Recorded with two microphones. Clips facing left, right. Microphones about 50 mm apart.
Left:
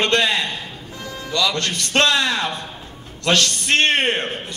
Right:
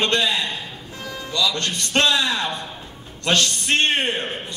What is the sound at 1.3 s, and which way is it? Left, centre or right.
A man's voice, left.